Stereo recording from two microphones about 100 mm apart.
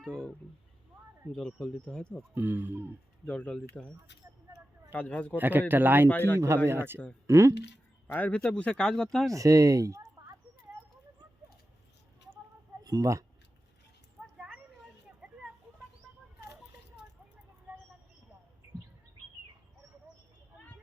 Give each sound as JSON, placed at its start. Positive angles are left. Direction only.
{"t": 0.0, "sound": "speech", "side_deg": 5}
{"t": 2.3, "sound": "speech", "side_deg": -20}
{"t": 3.2, "sound": "speech", "side_deg": 10}
{"t": 5.4, "sound": "speech", "side_deg": -20}
{"t": 6.1, "sound": "speech", "side_deg": 20}
{"t": 6.7, "sound": "speech", "side_deg": -25}
{"t": 8.0, "sound": "speech", "side_deg": 15}
{"t": 9.3, "sound": "speech", "side_deg": -35}
{"t": 12.8, "sound": "speech", "side_deg": -35}
{"t": 14.3, "sound": "a sound", "side_deg": -10}